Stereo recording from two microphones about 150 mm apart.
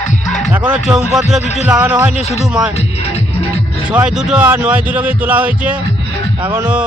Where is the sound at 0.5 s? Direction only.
10° right (ahead or behind).